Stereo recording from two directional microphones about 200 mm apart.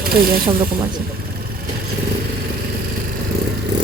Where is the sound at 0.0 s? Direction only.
50° right (ahead or behind).